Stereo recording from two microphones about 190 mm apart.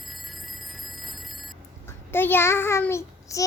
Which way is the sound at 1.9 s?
10° left (ahead or behind).